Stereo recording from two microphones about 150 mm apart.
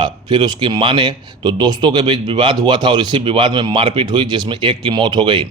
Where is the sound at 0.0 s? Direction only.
30° right (ahead or behind).